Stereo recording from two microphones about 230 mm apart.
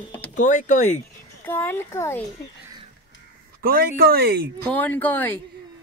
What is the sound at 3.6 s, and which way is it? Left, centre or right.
Speech, right.